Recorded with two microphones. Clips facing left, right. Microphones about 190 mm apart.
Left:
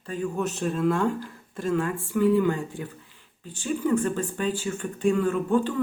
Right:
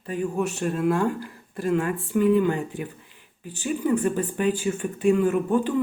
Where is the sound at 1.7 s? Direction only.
20° right (ahead or behind).